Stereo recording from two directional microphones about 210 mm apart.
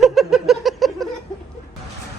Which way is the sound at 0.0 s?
Centre (ahead or behind).